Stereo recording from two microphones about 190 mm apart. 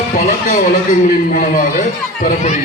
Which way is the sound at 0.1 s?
40° left (ahead or behind).